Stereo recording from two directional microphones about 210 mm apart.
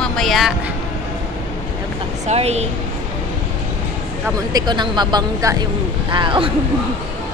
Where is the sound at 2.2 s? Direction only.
30° right (ahead or behind).